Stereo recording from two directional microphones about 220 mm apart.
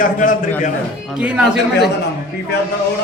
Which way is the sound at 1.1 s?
5° right (ahead or behind).